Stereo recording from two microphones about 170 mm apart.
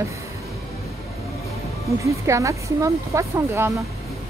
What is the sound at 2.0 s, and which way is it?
Speech, 20° right (ahead or behind).